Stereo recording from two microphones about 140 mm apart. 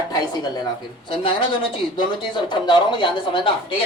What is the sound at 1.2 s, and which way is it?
Speech, 35° left (ahead or behind).